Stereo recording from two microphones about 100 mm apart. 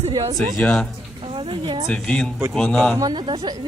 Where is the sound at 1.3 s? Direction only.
55° right (ahead or behind).